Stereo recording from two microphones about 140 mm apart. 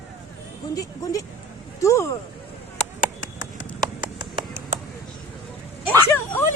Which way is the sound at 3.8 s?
30° right (ahead or behind).